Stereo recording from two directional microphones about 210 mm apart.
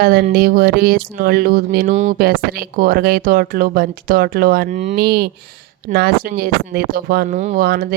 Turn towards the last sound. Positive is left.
turn(degrees=-45)  # may be behind; listen again after turning